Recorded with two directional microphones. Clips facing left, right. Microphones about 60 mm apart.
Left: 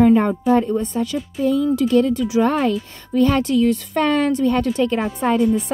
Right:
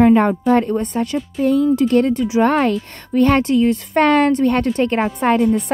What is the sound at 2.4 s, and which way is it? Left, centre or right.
Speech, right.